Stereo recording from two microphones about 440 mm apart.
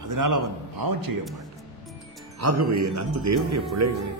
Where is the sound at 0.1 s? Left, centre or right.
Right.